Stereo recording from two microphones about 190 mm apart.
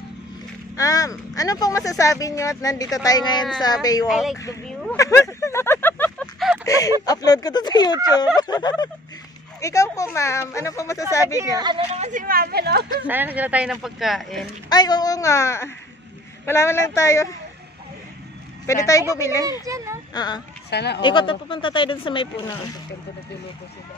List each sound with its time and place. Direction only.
0.7 s speech: 20° left (ahead or behind)
4.1 s speech: centre (ahead or behind)
4.9 s a sound: 15° left (ahead or behind)
7.1 s speech: 20° left (ahead or behind)
11.3 s a woman's voice: 20° right (ahead or behind)
12.0 s speech: 40° right (ahead or behind)
13.0 s speech: 10° right (ahead or behind)
14.7 s speech: 20° left (ahead or behind)
18.7 s speech: 15° left (ahead or behind)
19.6 s a child's voice: 15° right (ahead or behind)
20.2 s speech: 20° left (ahead or behind)
20.7 s speech: 60° left (ahead or behind)
21.0 s speech: 25° left (ahead or behind)